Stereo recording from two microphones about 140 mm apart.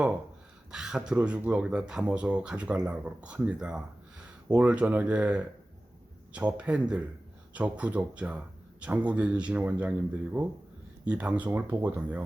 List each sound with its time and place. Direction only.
0.7 s speech: 5° right (ahead or behind)
11.0 s speech: 10° right (ahead or behind)